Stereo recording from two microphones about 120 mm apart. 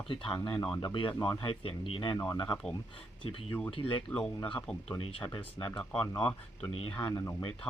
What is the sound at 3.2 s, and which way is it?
Speech, 45° left (ahead or behind).